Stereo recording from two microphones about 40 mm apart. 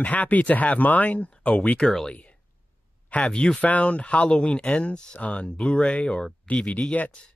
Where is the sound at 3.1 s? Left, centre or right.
Left.